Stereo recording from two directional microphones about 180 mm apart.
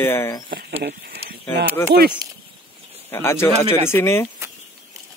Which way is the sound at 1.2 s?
35° right (ahead or behind).